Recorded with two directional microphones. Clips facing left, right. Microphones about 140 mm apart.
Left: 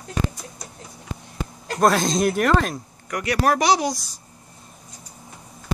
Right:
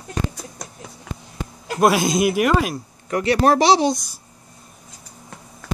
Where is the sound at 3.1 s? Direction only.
30° right (ahead or behind).